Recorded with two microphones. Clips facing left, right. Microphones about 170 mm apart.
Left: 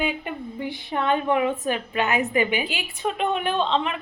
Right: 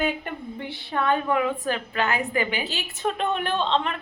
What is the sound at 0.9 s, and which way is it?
A woman's voice, 20° left (ahead or behind).